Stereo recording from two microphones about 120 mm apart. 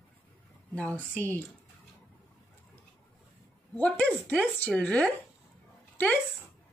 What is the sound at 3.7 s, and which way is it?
Speech, 10° left (ahead or behind).